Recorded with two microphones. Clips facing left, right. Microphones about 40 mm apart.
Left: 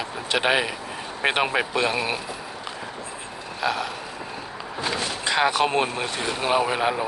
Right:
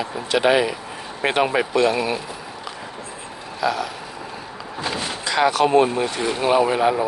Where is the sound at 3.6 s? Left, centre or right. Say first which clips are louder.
Right 3 dB; left.